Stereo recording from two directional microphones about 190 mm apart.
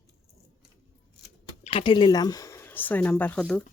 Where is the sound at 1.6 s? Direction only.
25° left (ahead or behind); by 3.6 s 5° left (ahead or behind).